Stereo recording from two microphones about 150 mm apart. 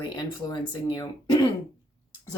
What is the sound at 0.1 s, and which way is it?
Speech, 30° left (ahead or behind).